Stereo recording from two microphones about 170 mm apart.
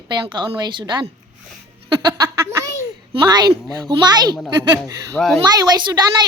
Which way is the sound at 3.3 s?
25° right (ahead or behind).